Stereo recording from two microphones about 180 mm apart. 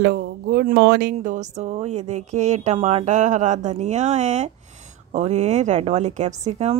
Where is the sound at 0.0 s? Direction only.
60° right (ahead or behind).